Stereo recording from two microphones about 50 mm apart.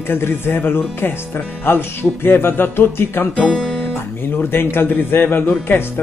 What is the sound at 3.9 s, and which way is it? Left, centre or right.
Guitar, left.